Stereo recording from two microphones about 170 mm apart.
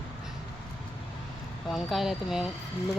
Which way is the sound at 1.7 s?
Centre (ahead or behind).